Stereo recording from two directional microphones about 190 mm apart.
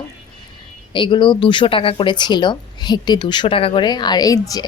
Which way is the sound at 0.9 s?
25° left (ahead or behind).